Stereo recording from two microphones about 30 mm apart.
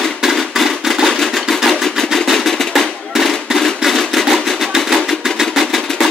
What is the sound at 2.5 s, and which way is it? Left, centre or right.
Drum, centre.